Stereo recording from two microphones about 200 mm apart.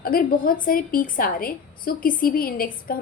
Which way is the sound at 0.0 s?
45° left (ahead or behind).